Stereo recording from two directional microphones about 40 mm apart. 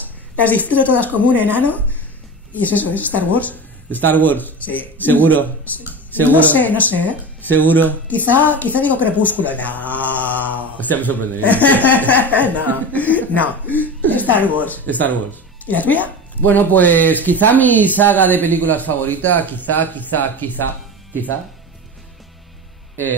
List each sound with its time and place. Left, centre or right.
0.6 s a woman's voice: right
0.9 s speech: left
1.2 s speech: right
1.6 s speech: left
12.3 s speech: right
12.9 s speech: left